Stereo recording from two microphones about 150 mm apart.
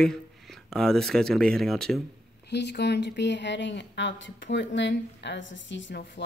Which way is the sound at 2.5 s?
90° left.